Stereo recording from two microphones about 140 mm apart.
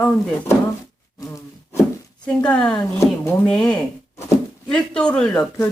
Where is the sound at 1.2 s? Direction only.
20° left (ahead or behind).